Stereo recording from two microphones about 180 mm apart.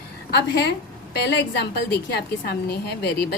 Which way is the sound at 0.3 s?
65° left (ahead or behind).